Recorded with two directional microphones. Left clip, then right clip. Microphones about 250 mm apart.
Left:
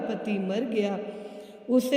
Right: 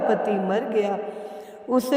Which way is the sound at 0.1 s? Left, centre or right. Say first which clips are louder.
Right 9 dB; centre.